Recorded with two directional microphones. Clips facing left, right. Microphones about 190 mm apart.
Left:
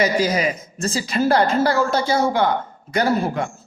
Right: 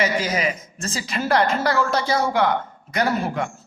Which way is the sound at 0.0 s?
35° left (ahead or behind).